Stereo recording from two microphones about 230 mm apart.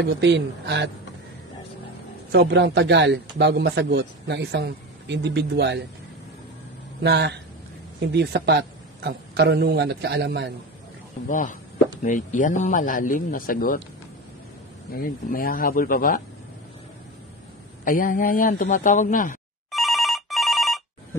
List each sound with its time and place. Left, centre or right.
0.0 s a man's voice: right
2.3 s a man's voice: right
7.0 s a man's voice: right
11.2 s speech: left
14.9 s speech: left
17.8 s speech: left
19.7 s telephone bell ringing: centre